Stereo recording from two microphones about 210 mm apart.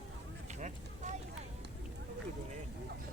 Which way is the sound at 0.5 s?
35° right (ahead or behind).